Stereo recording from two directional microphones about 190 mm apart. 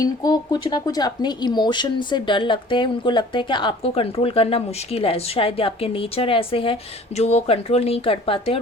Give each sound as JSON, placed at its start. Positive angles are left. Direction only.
{"t": 0.0, "sound": "speech", "side_deg": 20}